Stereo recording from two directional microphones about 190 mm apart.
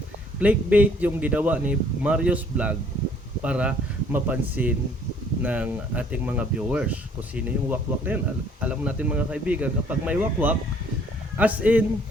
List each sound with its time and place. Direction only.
0.3 s speech: 5° right (ahead or behind)